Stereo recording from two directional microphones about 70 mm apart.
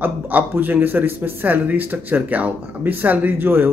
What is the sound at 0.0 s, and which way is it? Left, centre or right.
A man's voice, right.